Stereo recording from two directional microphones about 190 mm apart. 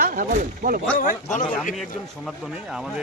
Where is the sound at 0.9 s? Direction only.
45° left (ahead or behind).